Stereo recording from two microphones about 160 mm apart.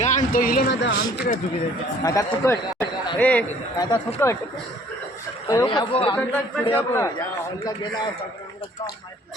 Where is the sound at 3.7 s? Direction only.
25° left (ahead or behind).